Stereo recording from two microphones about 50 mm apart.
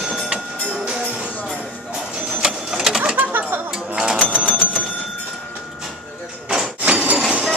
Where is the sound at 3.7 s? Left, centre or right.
Centre.